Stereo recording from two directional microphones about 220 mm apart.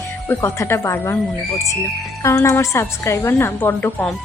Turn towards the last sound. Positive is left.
turn(degrees=10)  # may be behind; listen again after turning